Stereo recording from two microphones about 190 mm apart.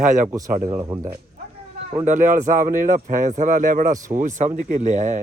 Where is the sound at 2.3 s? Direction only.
40° right (ahead or behind).